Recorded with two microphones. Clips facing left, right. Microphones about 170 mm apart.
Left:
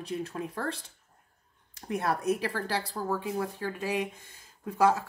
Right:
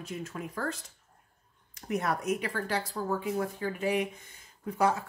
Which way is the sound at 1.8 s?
30° left (ahead or behind).